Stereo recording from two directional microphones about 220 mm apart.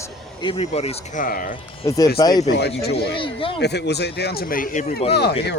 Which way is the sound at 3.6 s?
50° left (ahead or behind).